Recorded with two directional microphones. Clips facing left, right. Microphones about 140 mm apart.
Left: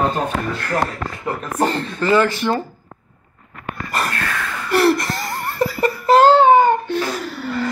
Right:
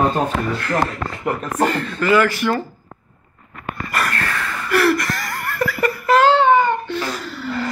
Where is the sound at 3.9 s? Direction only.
25° left (ahead or behind).